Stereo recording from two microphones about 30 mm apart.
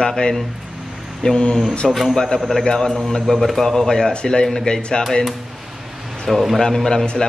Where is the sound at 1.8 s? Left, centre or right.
Centre.